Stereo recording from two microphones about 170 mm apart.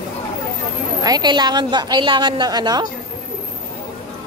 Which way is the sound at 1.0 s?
25° right (ahead or behind).